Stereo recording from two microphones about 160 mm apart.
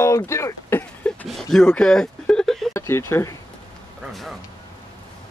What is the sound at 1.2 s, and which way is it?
Speech, centre (ahead or behind).